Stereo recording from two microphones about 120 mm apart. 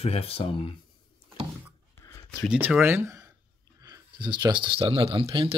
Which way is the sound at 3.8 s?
35° right (ahead or behind).